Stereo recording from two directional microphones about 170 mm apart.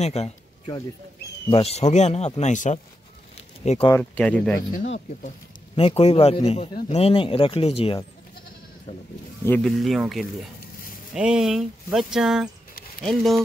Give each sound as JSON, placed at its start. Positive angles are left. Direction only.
{"t": 0.0, "sound": "a man's voice", "side_deg": 40}
{"t": 4.0, "sound": "speech", "side_deg": 5}
{"t": 4.6, "sound": "speech", "side_deg": 85}
{"t": 5.8, "sound": "a man's voice", "side_deg": 35}
{"t": 9.4, "sound": "speech", "side_deg": 10}
{"t": 9.7, "sound": "speech", "side_deg": 0}